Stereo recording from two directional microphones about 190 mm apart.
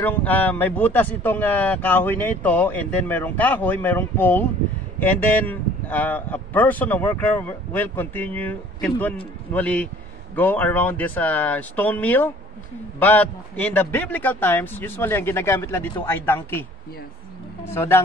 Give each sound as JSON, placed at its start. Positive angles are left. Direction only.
{"t": 0.0, "sound": "speech", "side_deg": 10}
{"t": 17.6, "sound": "speech", "side_deg": 15}